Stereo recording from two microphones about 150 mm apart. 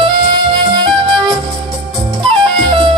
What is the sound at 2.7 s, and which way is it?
Music, 35° right (ahead or behind).